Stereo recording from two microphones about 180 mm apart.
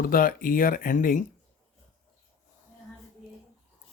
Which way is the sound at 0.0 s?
50° left (ahead or behind).